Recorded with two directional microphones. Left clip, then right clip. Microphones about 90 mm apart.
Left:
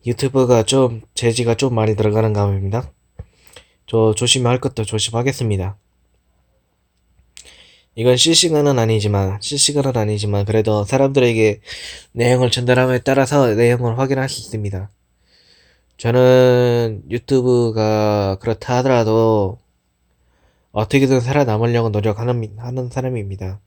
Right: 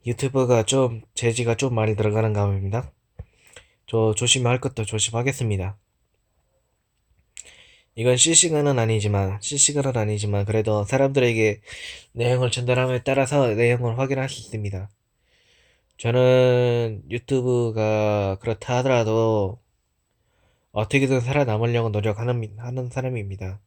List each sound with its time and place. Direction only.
0.0 s speech: 30° left (ahead or behind)
7.3 s speech: 30° left (ahead or behind)
11.8 s speech: 50° left (ahead or behind)
12.8 s speech: 80° left
13.1 s speech: 45° left (ahead or behind)
16.0 s a man's voice: 35° left (ahead or behind)